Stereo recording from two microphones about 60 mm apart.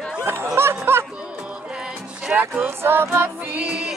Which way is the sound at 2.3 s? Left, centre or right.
Right.